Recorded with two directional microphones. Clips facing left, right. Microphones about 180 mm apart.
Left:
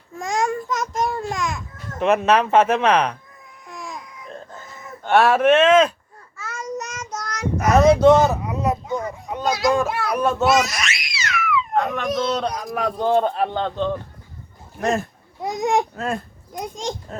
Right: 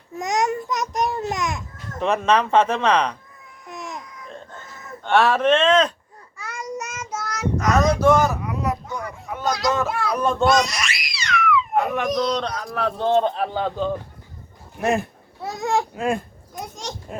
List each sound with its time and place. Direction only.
0.2 s babbling: 20° right (ahead or behind)
2.0 s speech: 5° left (ahead or behind)
3.7 s baby cry: 20° right (ahead or behind)
5.0 s speech: 10° left (ahead or behind)
6.3 s child singing: 15° right (ahead or behind)
7.6 s a sound: 25° left (ahead or behind)
9.9 s a sound: 5° left (ahead or behind)
11.7 s baby cry: 5° right (ahead or behind)
12.0 s speech: centre (ahead or behind)
15.4 s speech: 15° left (ahead or behind)
17.1 s a sound: 10° right (ahead or behind)